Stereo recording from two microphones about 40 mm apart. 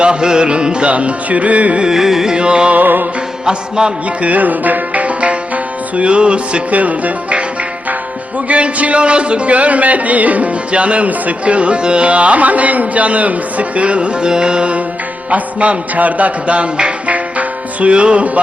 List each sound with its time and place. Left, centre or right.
0.0 s music: right
1.8 s carnatic music: centre
2.3 s music: right
2.7 s music: right
3.4 s music: right
4.2 s tabla: right
6.0 s music: right
6.7 s speech: right
8.4 s speech: right
14.3 s music: right
15.3 s music: right